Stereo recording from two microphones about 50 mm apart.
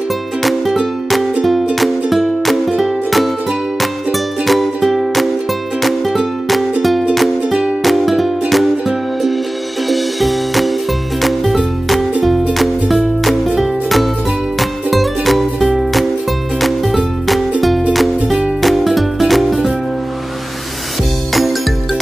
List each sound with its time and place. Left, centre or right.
0.4 s music: centre
4.5 s music: centre
7.8 s music: centre